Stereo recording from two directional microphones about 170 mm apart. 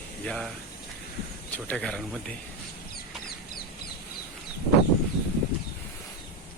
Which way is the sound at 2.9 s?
65° left (ahead or behind).